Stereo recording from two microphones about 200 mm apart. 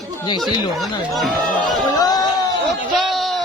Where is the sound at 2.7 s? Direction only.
Centre (ahead or behind).